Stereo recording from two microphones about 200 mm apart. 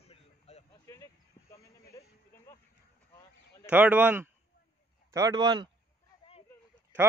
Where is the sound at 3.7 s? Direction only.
5° right (ahead or behind).